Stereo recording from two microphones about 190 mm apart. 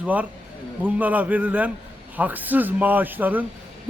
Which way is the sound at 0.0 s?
10° right (ahead or behind).